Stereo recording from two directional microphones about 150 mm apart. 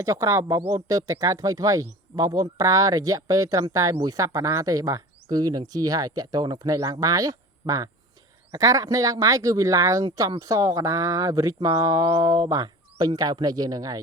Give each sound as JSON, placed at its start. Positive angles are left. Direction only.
{"t": 0.0, "sound": "speech", "side_deg": -20}